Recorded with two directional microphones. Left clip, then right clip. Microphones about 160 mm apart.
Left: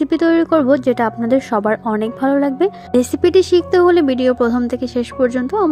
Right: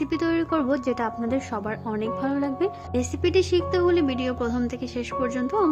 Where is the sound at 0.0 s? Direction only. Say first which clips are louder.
Left 10 dB; 35° left (ahead or behind).